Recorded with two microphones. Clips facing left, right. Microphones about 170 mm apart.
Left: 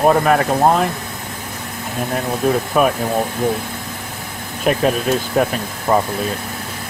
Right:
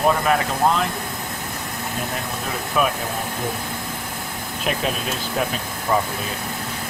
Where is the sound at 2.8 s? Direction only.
45° left (ahead or behind).